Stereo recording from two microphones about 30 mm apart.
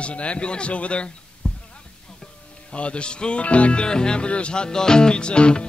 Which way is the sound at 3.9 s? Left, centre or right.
Left.